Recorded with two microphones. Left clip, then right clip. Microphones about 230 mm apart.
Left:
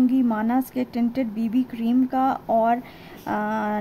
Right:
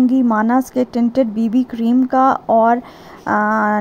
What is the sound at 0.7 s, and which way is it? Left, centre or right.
Speech, centre.